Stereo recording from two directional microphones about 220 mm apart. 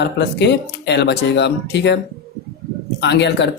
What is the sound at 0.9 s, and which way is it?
Speech, 50° left (ahead or behind).